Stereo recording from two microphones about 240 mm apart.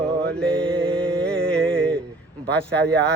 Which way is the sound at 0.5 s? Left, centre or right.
Right.